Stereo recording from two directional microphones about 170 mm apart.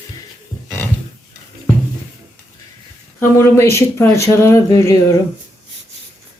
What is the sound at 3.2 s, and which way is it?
Speech, 15° left (ahead or behind).